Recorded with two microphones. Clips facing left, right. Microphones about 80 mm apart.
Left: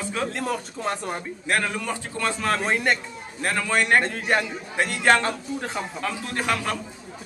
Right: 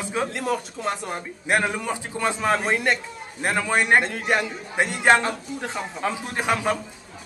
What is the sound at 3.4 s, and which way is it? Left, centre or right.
Speech, centre.